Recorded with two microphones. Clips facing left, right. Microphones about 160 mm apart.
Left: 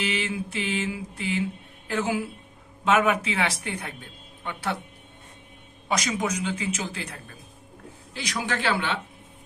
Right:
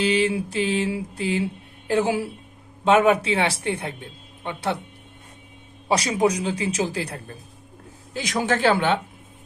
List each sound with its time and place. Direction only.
0.0 s a man's voice: 35° right (ahead or behind)
5.9 s a man's voice: 35° right (ahead or behind)